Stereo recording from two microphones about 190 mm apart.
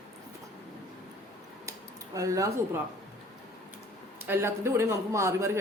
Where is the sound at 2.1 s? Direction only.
15° right (ahead or behind).